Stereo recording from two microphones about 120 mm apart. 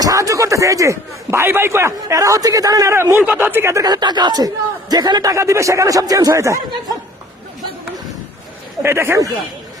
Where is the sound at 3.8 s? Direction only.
35° right (ahead or behind).